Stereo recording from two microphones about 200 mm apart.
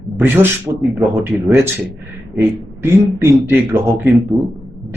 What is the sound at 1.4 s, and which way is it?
Speech, 10° right (ahead or behind).